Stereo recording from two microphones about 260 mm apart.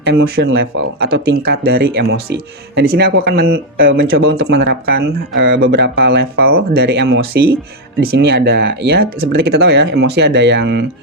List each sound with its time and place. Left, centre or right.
0.0 s speech: right